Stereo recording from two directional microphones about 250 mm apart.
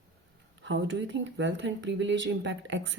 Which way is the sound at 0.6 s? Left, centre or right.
Right.